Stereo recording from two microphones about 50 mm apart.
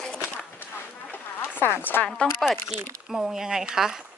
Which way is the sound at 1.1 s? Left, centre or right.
Left.